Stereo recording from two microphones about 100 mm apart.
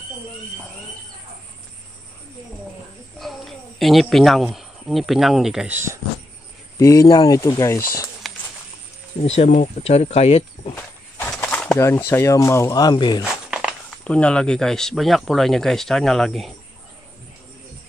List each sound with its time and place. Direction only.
3.2 s speech: centre (ahead or behind)
5.7 s speech: 25° right (ahead or behind)
6.8 s speech: 35° left (ahead or behind)
9.2 s speech: 90° left
11.8 s speech: 25° left (ahead or behind); by 13.2 s 45° left (ahead or behind)
13.2 s a sound: 10° right (ahead or behind)
14.0 s speech: 10° left (ahead or behind)